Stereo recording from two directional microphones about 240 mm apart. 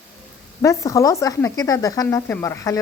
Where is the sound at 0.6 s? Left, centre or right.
Centre.